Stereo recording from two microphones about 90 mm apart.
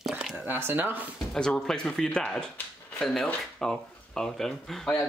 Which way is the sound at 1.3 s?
5° left (ahead or behind).